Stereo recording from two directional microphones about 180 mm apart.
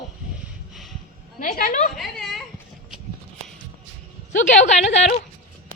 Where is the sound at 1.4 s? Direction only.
50° left (ahead or behind).